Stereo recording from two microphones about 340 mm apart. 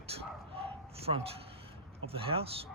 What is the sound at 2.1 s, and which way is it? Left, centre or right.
Speech, centre.